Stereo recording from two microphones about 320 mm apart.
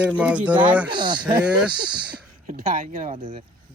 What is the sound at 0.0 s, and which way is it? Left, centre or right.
Speech, centre.